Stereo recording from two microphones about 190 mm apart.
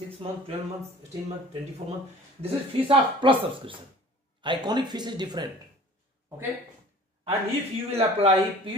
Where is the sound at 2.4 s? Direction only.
25° right (ahead or behind).